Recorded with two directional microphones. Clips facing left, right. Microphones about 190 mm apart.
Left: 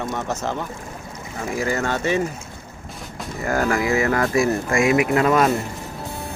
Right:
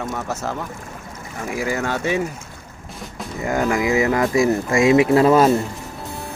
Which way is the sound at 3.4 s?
20° right (ahead or behind).